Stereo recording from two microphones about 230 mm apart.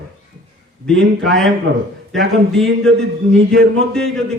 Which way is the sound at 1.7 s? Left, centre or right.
Right.